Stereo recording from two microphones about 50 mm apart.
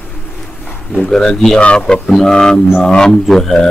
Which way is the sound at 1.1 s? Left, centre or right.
Centre.